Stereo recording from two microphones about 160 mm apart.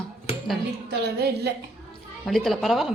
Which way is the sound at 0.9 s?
90° right.